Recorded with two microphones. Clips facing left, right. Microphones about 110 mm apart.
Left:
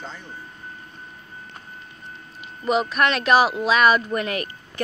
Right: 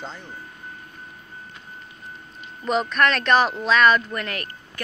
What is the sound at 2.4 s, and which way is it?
Speech, 5° left (ahead or behind).